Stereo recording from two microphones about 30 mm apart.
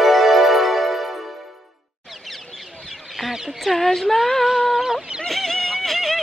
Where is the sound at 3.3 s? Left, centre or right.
Centre.